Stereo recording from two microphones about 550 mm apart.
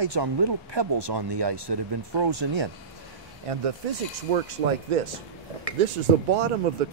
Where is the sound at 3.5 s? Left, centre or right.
Right.